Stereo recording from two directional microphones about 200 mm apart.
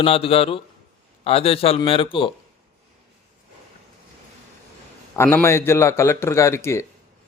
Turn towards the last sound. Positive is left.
turn(degrees=15)  # may be behind; listen again after turning